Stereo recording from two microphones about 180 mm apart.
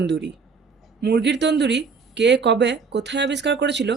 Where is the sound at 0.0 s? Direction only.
75° right (ahead or behind).